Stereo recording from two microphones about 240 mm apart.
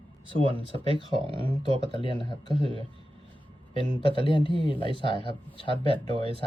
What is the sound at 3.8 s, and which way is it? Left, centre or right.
Speech, right.